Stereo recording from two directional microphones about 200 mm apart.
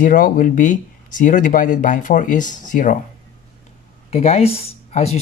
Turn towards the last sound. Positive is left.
turn(degrees=30)  # may be behind; listen again after turning